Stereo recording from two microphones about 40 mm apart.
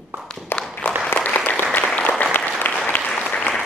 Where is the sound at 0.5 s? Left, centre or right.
Left.